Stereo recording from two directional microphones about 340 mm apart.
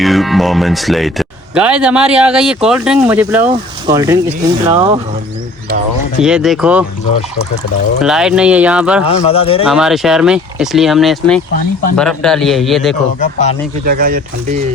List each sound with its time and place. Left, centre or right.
0.0 s speech: centre
6.1 s speech: centre
7.9 s speech: centre
9.0 s speech: centre
9.6 s speech: centre
13.1 s speech: left
13.8 s speech: right